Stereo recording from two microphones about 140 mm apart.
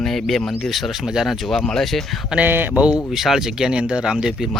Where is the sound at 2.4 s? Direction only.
15° right (ahead or behind).